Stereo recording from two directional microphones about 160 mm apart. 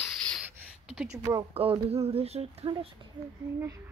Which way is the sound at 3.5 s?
15° right (ahead or behind).